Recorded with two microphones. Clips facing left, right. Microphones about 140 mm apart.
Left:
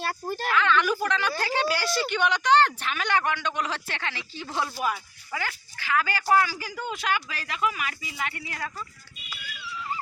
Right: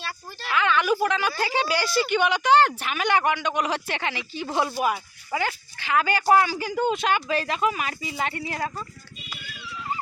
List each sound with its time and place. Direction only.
0.0 s speech: 50° left (ahead or behind)
0.5 s a woman's voice: 10° right (ahead or behind); by 8.7 s 30° right (ahead or behind)